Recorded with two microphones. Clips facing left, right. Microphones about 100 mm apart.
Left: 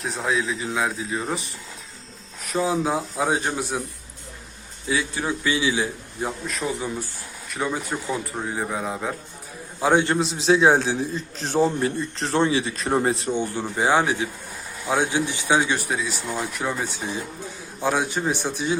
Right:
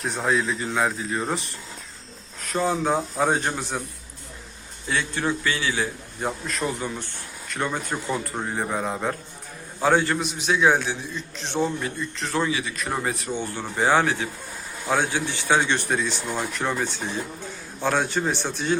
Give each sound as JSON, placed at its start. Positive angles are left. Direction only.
{"t": 0.0, "sound": "speech", "side_deg": 0}
{"t": 4.9, "sound": "speech", "side_deg": 10}
{"t": 6.1, "sound": "speech", "side_deg": 0}
{"t": 9.8, "sound": "a man's voice", "side_deg": 20}
{"t": 13.3, "sound": "speech", "side_deg": 15}